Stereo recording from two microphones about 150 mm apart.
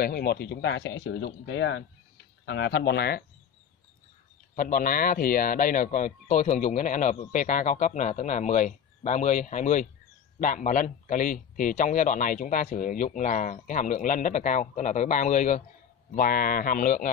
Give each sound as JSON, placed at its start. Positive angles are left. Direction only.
{"t": 0.0, "sound": "speech", "side_deg": 90}
{"t": 3.0, "sound": "speech", "side_deg": 90}
{"t": 4.6, "sound": "speech", "side_deg": 70}
{"t": 16.1, "sound": "speech", "side_deg": 70}